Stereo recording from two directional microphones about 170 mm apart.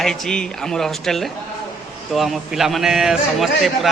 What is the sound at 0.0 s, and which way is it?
A man's voice, 5° left (ahead or behind).